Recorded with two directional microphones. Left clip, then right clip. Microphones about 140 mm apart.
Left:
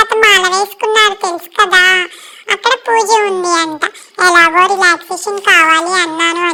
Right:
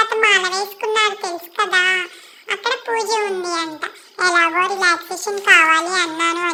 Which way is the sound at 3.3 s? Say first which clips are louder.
Left 9 dB; 65° left (ahead or behind).